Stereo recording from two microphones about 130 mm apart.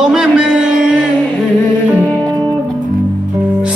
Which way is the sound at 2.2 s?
30° right (ahead or behind).